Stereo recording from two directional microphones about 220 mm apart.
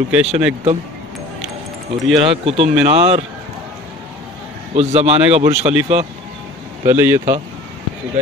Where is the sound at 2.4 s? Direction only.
25° right (ahead or behind).